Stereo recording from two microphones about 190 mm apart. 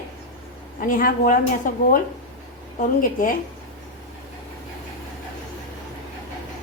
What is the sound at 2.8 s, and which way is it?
Speech, 45° left (ahead or behind).